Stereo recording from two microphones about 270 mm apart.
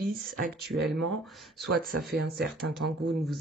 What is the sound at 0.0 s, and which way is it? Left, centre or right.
Speech, right.